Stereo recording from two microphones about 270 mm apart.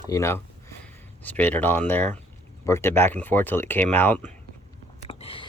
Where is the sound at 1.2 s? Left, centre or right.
Centre.